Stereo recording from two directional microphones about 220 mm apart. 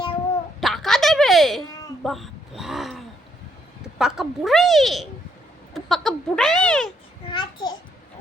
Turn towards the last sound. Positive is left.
turn(degrees=20)  # may be behind; listen again after turning